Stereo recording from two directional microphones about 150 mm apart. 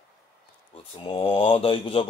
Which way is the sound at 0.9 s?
35° left (ahead or behind).